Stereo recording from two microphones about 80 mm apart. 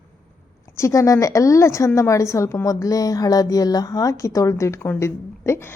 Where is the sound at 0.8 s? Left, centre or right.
Left.